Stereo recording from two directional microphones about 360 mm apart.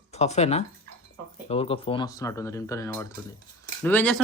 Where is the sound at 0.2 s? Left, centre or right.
Centre.